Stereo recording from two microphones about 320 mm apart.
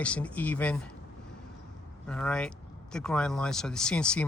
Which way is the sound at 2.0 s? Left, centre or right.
Centre.